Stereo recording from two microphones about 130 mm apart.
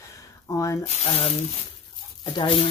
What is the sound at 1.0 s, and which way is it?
Speech, 50° left (ahead or behind).